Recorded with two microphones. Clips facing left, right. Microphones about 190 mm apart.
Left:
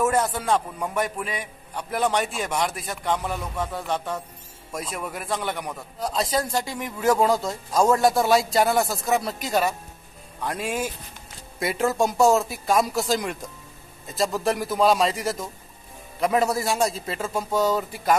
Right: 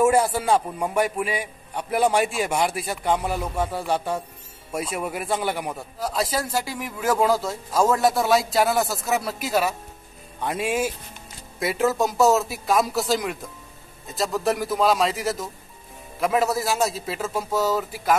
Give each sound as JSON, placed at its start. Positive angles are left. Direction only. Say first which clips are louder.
{"t": 0.0, "sound": "a man's voice", "louder": "right 4 dB", "side_deg": -10}